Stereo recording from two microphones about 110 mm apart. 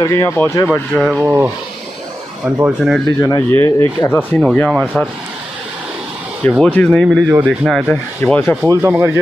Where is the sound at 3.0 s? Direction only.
35° left (ahead or behind).